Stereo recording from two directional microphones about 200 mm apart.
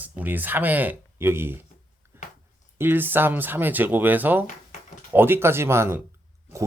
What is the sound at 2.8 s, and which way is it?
Speech, 10° right (ahead or behind).